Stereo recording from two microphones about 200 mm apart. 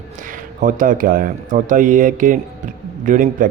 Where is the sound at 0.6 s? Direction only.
40° right (ahead or behind).